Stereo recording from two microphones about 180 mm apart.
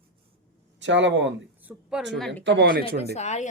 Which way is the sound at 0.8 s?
80° right.